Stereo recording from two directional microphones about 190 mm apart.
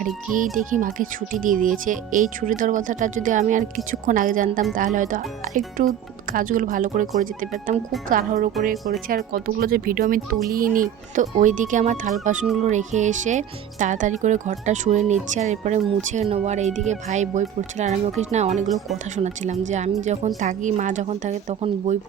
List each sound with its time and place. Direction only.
0.6 s speech: 45° right (ahead or behind)